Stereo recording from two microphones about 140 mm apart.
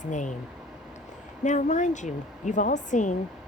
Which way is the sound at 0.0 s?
60° left (ahead or behind).